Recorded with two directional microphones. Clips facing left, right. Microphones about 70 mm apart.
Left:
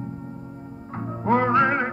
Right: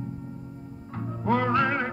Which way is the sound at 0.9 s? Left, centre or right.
Left.